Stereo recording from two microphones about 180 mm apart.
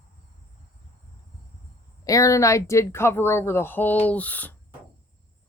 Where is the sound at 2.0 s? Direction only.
20° left (ahead or behind).